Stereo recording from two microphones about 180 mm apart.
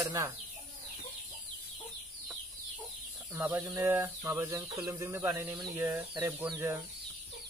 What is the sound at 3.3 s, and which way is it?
Speech, 10° right (ahead or behind).